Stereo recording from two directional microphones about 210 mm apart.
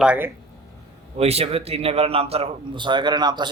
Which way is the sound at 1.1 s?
30° right (ahead or behind).